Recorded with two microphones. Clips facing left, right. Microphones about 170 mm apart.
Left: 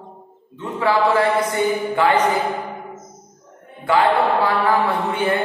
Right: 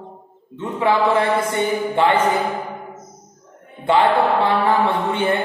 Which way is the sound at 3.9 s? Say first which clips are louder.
Right 1 dB; 25° right (ahead or behind).